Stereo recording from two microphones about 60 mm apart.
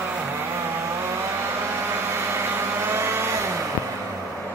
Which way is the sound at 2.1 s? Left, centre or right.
Right.